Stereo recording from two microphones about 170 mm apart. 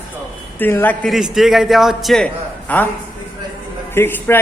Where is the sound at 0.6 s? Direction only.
10° left (ahead or behind).